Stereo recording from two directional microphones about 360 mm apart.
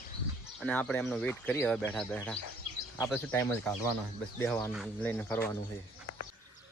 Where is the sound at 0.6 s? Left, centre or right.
Centre.